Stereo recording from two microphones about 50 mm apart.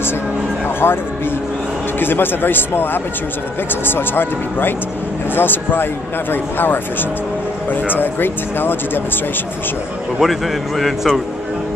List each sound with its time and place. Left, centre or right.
0.8 s speech: left
10.1 s a man's voice: centre